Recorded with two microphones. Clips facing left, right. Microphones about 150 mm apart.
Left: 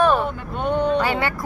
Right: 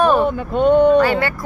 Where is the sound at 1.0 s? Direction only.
20° left (ahead or behind).